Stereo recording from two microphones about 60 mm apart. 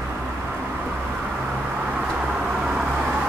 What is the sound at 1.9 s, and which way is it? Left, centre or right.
Vehicle, centre.